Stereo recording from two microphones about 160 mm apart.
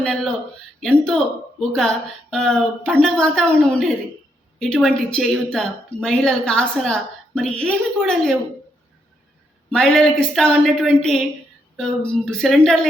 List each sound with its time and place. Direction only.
0.0 s a woman's voice: centre (ahead or behind)
9.7 s a woman's voice: centre (ahead or behind)